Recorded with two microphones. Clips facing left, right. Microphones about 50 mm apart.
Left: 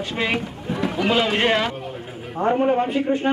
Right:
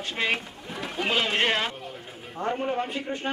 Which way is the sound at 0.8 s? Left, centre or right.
Left.